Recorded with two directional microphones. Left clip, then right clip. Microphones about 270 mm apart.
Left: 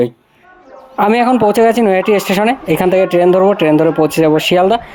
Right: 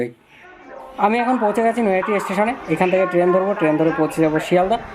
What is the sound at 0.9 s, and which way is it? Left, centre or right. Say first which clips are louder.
Speech: left 7 dB; left.